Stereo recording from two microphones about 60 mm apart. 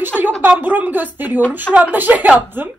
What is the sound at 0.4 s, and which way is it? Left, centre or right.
A woman's voice, right.